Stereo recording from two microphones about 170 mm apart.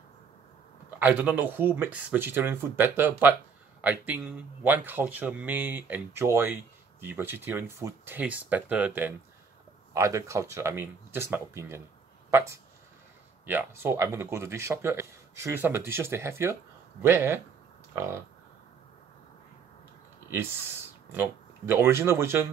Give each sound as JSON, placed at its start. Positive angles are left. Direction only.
{"t": 0.8, "sound": "speech", "side_deg": -10}
{"t": 21.1, "sound": "speech", "side_deg": -10}